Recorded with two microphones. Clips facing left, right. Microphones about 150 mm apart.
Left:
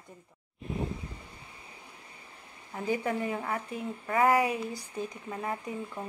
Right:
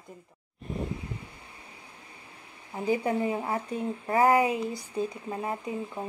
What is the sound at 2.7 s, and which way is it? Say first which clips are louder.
Speech: right 4 dB; 20° right (ahead or behind).